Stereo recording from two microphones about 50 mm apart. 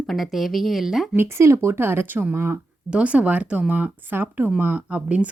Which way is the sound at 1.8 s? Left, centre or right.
Right.